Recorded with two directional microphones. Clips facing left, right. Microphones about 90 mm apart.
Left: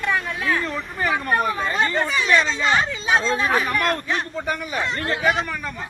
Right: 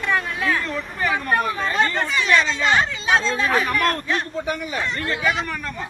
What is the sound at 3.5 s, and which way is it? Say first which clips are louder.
Speech: right 1 dB; 5° left (ahead or behind).